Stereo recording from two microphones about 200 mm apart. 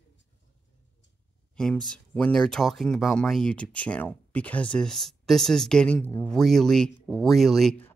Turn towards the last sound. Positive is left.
turn(degrees=5)  # may be behind; listen again after turning